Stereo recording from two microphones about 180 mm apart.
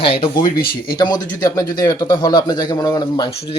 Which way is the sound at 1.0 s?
25° left (ahead or behind).